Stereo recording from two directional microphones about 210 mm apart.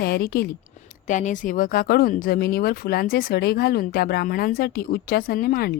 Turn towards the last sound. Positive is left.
turn(degrees=45)  # may be behind; listen again after turning